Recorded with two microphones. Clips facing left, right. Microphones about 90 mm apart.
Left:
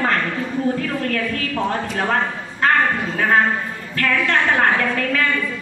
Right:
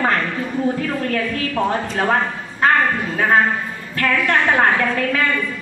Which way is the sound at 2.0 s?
15° right (ahead or behind).